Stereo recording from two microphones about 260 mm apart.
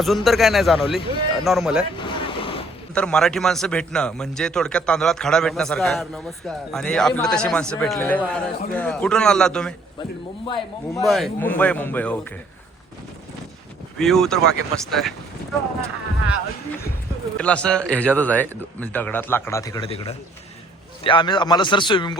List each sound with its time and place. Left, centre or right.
0.0 s a man's voice: centre
0.9 s speech: centre
1.5 s a man's voice: centre
2.0 s vehicle: centre
2.9 s a man's voice: centre
10.0 s a man's voice: centre
11.0 s a man's voice: centre
14.0 s a man's voice: centre
17.3 s a man's voice: centre